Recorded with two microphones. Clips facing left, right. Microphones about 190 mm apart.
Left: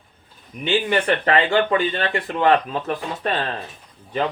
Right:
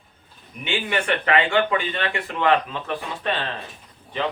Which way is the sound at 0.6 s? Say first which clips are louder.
Left 5 dB; 35° left (ahead or behind).